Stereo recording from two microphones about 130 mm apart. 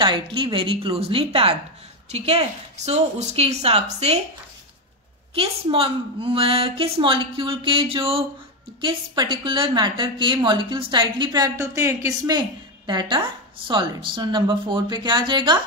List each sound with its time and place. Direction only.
0.0 s a woman's voice: 40° right (ahead or behind); by 4.2 s 55° right (ahead or behind)
5.3 s a woman's voice: 45° right (ahead or behind)
8.8 s a woman's voice: 35° right (ahead or behind)